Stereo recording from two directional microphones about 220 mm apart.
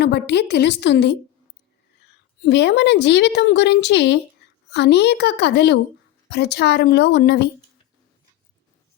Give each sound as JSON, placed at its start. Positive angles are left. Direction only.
{"t": 0.0, "sound": "a woman's voice", "side_deg": 50}
{"t": 2.4, "sound": "a woman's voice", "side_deg": 50}